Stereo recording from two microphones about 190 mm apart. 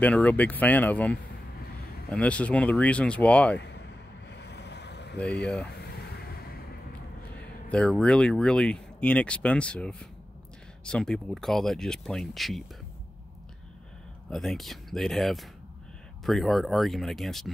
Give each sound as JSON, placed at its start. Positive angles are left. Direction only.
{"t": 0.0, "sound": "speech", "side_deg": 5}
{"t": 3.5, "sound": "a sound", "side_deg": 65}
{"t": 8.0, "sound": "speech", "side_deg": 5}
{"t": 14.3, "sound": "speech", "side_deg": 0}